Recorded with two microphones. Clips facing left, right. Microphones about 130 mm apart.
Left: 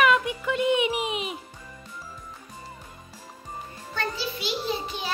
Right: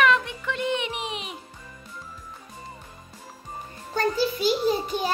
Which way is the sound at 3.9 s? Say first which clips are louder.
Right 7 dB; 40° right (ahead or behind).